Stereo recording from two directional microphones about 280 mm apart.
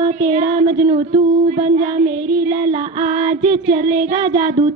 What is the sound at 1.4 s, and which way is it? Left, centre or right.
Child singing, right.